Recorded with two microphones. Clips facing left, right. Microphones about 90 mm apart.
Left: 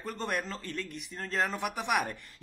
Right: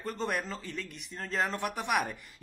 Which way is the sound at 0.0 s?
Centre (ahead or behind).